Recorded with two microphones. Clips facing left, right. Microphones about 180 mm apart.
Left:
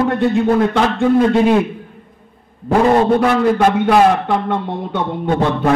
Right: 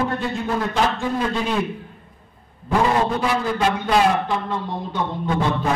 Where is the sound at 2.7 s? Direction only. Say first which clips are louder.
Left 7 dB; 60° left (ahead or behind).